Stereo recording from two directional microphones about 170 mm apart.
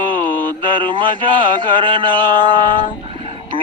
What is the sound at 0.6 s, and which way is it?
Speech, 30° right (ahead or behind).